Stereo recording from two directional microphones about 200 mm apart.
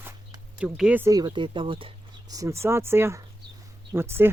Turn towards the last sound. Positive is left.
turn(degrees=-10)  # may be behind; listen again after turning